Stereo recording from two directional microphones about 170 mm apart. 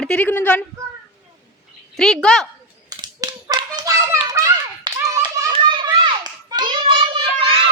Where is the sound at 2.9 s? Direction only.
20° right (ahead or behind).